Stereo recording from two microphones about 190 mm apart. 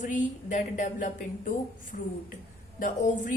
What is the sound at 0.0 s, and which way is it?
A woman's voice, 40° left (ahead or behind).